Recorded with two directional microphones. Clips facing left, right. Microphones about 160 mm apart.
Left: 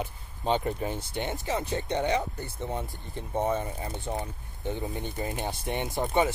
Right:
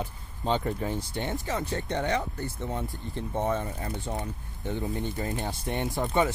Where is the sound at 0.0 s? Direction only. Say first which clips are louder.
Even; 15° left (ahead or behind).